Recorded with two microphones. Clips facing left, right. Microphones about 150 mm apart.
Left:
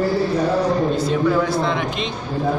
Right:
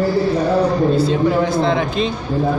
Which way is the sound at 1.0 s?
25° right (ahead or behind).